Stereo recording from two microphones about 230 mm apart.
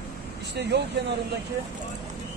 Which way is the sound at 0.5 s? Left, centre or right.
Right.